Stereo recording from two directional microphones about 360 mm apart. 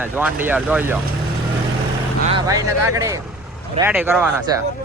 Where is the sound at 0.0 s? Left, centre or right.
Centre.